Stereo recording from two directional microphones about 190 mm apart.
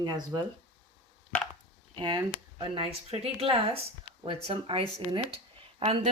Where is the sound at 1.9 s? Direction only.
25° right (ahead or behind).